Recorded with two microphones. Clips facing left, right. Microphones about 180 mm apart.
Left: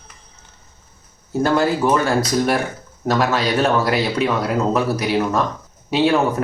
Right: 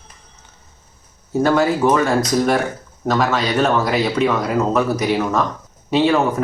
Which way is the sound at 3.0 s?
5° left (ahead or behind).